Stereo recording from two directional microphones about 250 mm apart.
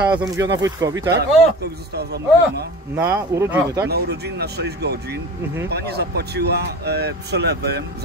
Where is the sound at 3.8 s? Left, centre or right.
Right.